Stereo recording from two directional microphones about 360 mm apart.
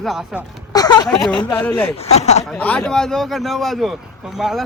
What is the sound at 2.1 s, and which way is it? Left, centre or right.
Speech, centre.